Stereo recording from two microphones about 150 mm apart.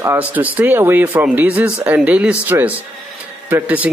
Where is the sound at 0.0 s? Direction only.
15° right (ahead or behind).